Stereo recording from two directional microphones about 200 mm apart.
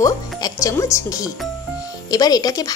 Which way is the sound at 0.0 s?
15° left (ahead or behind).